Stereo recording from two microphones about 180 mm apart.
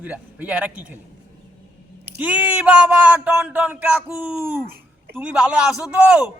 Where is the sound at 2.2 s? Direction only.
10° right (ahead or behind).